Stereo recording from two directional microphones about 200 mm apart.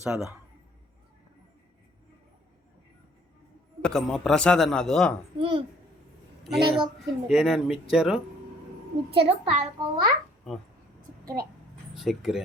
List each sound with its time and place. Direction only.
0.0 s a man's voice: 5° right (ahead or behind)
3.8 s a man's voice: 5° left (ahead or behind)
5.4 s a child's voice: 25° right (ahead or behind)
6.4 s a woman's voice: centre (ahead or behind)
9.1 s a child's voice: 30° right (ahead or behind)
10.5 s a man's voice: centre (ahead or behind)
11.9 s a man's voice: centre (ahead or behind)